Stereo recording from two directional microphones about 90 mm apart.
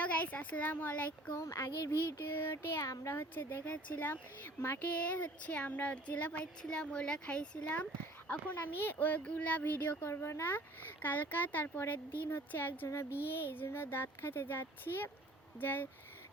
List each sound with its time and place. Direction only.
0.0 s speech: 15° left (ahead or behind)
1.4 s child singing: 35° left (ahead or behind)
3.2 s speech: 20° left (ahead or behind)
4.9 s speech: 15° left (ahead or behind)